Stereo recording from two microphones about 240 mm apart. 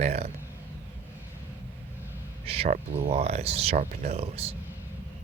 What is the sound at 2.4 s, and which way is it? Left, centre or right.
Speech, right.